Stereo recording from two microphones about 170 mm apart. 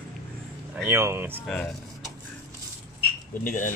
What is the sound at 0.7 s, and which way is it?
Speech, 15° right (ahead or behind).